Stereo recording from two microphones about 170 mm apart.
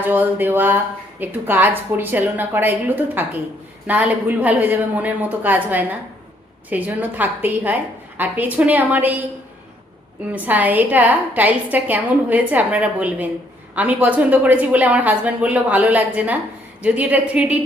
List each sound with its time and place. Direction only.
0.0 s a woman's voice: 10° right (ahead or behind)
10.3 s a woman's voice: 10° right (ahead or behind)